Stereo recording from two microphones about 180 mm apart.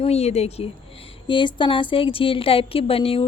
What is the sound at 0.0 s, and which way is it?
Speech, 35° left (ahead or behind).